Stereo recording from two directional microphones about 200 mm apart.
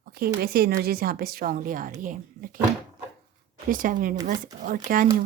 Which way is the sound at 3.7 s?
45° right (ahead or behind).